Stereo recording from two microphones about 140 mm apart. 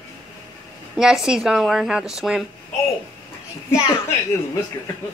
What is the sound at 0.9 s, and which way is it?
A woman's voice, 5° right (ahead or behind).